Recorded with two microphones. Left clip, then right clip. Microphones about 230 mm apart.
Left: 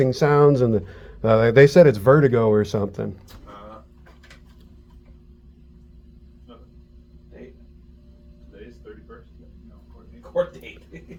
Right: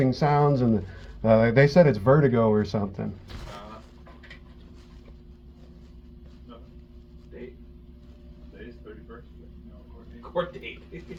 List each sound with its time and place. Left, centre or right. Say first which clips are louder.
0.0 s speech: left 6 dB; left